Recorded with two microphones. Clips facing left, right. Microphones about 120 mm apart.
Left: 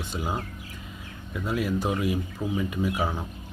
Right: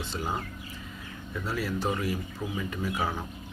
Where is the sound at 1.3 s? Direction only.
15° left (ahead or behind).